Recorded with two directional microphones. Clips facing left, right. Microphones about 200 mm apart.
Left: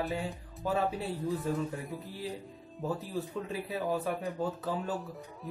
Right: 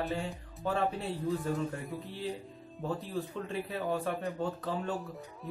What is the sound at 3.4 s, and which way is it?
Speech, 5° left (ahead or behind).